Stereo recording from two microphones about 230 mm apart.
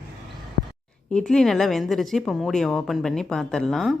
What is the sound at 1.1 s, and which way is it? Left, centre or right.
Speech, centre.